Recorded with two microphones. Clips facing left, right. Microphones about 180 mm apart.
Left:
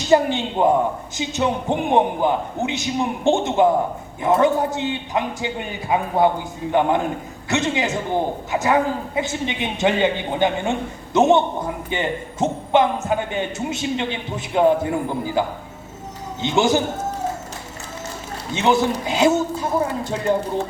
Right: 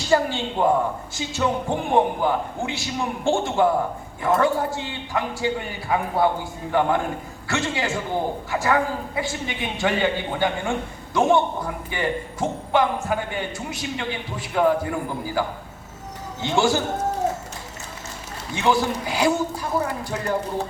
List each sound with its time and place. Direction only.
0.0 s a man's voice: 20° left (ahead or behind)
18.5 s a man's voice: 20° left (ahead or behind)